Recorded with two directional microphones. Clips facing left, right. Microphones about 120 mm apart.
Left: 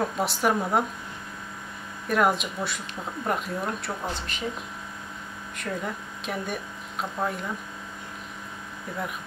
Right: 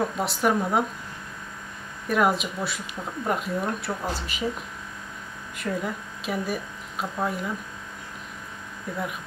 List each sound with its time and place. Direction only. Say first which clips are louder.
0.0 s speech: right 1 dB; centre (ahead or behind)
2.0 s speech: right 1 dB; centre (ahead or behind)
5.6 s speech: right 3 dB; centre (ahead or behind)